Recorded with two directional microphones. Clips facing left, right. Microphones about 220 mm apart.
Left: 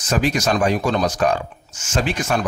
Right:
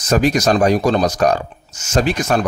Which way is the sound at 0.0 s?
40° right (ahead or behind).